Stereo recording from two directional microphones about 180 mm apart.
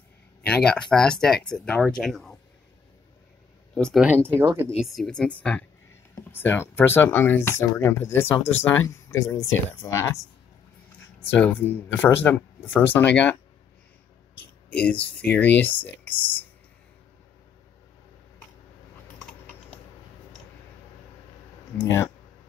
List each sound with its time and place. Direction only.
0.5 s speech: 5° left (ahead or behind)
3.7 s speech: centre (ahead or behind); by 4.6 s 15° right (ahead or behind)
4.7 s speech: centre (ahead or behind)
14.3 s a sound: 5° left (ahead or behind)
15.6 s speech: 10° left (ahead or behind)
21.7 s speech: 15° left (ahead or behind)